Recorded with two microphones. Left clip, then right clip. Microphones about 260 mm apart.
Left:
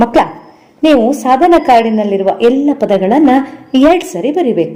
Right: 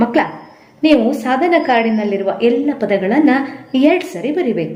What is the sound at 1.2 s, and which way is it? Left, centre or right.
A woman's voice, left.